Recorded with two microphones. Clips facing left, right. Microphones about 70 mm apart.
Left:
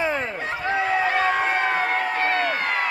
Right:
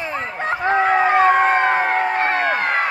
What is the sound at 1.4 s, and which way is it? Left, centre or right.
Crowd, right.